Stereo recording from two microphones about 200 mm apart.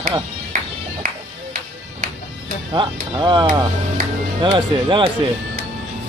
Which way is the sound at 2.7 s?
20° right (ahead or behind).